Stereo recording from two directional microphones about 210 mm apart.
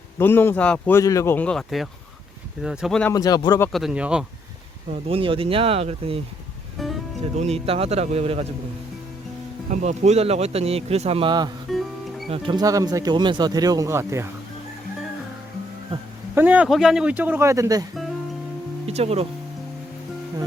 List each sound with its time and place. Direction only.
0.2 s speech: 10° left (ahead or behind)
3.1 s speech: 15° left (ahead or behind)
3.7 s speech: centre (ahead or behind)
5.0 s speech: 25° right (ahead or behind)
6.8 s speech: centre (ahead or behind)
7.3 s speech: 30° right (ahead or behind)
9.7 s speech: 35° right (ahead or behind); by 14.3 s 10° right (ahead or behind)
16.3 s speech: 10° right (ahead or behind)
18.9 s speech: 30° right (ahead or behind)